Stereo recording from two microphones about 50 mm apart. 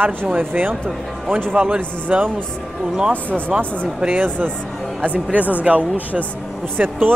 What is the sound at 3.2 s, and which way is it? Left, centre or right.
Speech, left.